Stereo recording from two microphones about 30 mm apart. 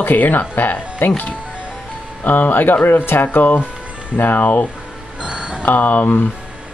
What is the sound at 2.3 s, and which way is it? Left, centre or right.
Speech, left.